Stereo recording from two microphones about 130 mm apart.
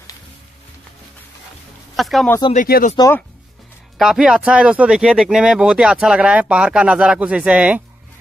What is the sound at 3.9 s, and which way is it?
Speech, centre (ahead or behind).